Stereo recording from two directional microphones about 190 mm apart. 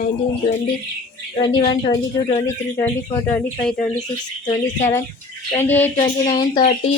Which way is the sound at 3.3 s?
5° left (ahead or behind).